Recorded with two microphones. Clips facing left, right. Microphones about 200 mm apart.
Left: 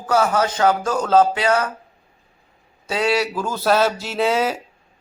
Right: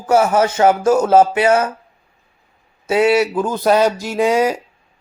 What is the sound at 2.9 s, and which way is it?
Speech, 20° right (ahead or behind).